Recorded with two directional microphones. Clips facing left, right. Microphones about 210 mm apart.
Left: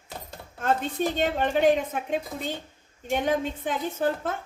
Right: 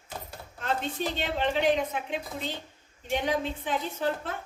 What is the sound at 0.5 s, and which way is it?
A woman's voice, 45° left (ahead or behind).